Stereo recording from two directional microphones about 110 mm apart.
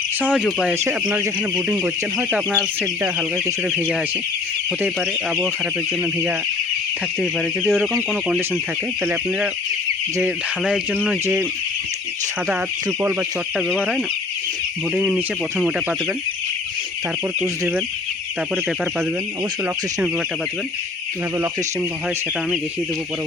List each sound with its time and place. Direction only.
0.2 s a sound: 10° right (ahead or behind)
3.3 s speech: 20° right (ahead or behind)
7.2 s speech: centre (ahead or behind)
10.6 s speech: 5° right (ahead or behind)
13.6 s speech: centre (ahead or behind)